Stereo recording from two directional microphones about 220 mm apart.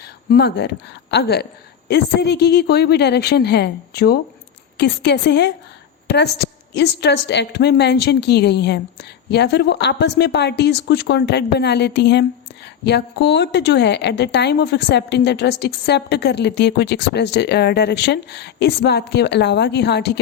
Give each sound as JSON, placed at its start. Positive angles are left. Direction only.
{"t": 0.0, "sound": "a woman's voice", "side_deg": 50}